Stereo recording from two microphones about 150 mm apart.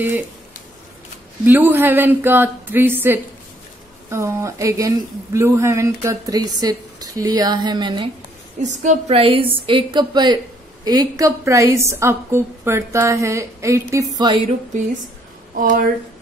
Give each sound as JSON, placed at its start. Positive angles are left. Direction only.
{"t": 1.4, "sound": "a woman's voice", "side_deg": -15}
{"t": 8.6, "sound": "a woman's voice", "side_deg": -50}
{"t": 15.5, "sound": "speech", "side_deg": -60}